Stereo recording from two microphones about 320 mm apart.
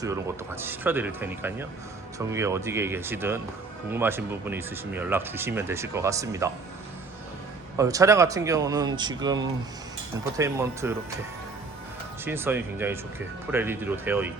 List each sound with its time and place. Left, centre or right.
0.0 s speech: centre
7.8 s speech: centre
12.2 s speech: centre